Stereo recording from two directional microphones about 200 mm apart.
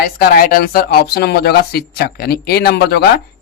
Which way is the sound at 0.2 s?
45° left (ahead or behind).